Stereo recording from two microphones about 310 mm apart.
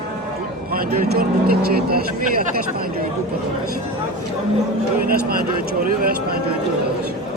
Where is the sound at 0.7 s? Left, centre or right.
Right.